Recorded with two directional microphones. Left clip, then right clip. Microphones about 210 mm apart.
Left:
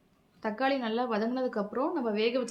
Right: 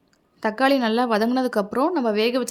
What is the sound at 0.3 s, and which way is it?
A woman's voice, 55° right (ahead or behind).